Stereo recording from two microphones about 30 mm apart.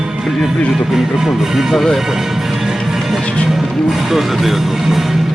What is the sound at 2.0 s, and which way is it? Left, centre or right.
Music, centre.